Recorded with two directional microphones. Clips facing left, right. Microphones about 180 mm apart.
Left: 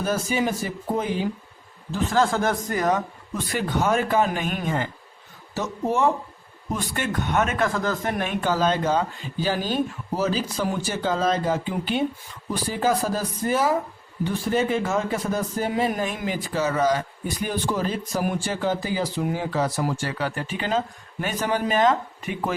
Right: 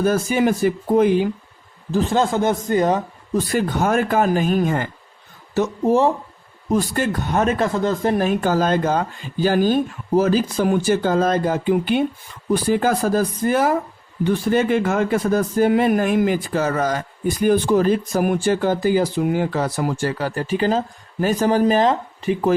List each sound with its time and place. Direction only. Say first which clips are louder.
0.0 s speech: right 6 dB; 55° right (ahead or behind)
2.0 s speech: right 2 dB; 20° right (ahead or behind)
3.5 s speech: right 2 dB; 45° right (ahead or behind)
6.7 s speech: right 7 dB; 40° right (ahead or behind)